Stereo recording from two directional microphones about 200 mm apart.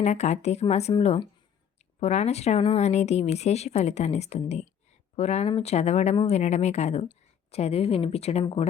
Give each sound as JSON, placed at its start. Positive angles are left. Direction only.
{"t": 0.0, "sound": "speech", "side_deg": 35}